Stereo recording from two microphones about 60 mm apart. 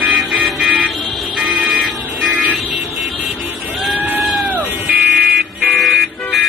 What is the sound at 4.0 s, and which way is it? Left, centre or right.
Sheep, right.